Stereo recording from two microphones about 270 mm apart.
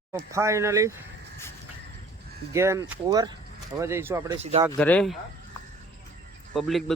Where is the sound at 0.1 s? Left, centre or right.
Centre.